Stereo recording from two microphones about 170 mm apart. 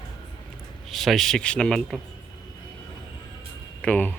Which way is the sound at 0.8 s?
Centre (ahead or behind).